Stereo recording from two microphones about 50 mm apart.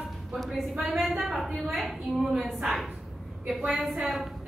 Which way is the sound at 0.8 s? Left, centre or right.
Centre.